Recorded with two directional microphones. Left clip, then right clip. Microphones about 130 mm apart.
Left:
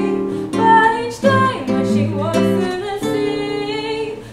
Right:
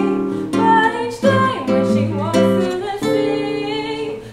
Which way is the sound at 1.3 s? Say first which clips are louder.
Even; 25° right (ahead or behind).